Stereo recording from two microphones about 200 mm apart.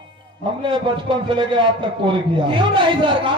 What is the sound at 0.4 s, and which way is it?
A man's voice, 25° right (ahead or behind).